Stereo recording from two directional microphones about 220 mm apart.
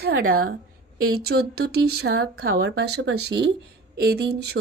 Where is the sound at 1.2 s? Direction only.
45° right (ahead or behind).